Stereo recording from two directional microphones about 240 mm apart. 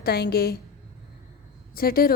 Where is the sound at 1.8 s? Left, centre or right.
Left.